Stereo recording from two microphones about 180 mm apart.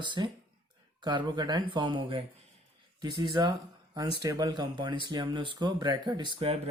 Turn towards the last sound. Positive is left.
turn(degrees=-30)  # may be behind; listen again after turning